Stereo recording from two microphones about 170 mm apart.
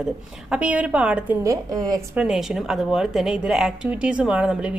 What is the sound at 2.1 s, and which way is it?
Speech, 5° right (ahead or behind).